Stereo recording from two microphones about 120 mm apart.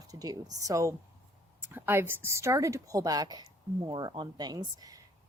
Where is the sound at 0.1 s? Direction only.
30° right (ahead or behind).